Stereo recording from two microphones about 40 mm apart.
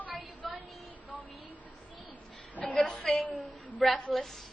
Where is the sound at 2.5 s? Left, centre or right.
Left.